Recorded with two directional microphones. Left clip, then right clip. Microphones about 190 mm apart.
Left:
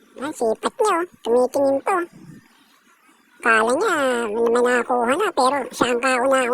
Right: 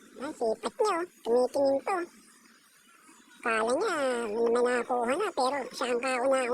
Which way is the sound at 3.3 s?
40° left (ahead or behind).